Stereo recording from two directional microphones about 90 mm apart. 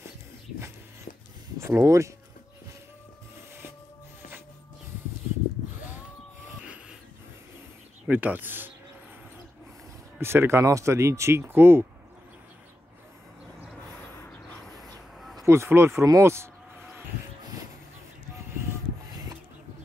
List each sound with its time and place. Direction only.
1.6 s speech: 30° right (ahead or behind)
8.1 s speech: 20° right (ahead or behind)
10.2 s speech: 25° right (ahead or behind)
15.4 s speech: 30° right (ahead or behind)
19.0 s rub: 45° right (ahead or behind)